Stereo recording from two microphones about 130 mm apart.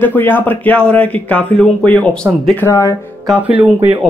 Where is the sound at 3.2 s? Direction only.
10° right (ahead or behind).